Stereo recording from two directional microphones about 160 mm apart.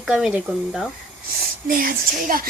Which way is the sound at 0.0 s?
5° right (ahead or behind).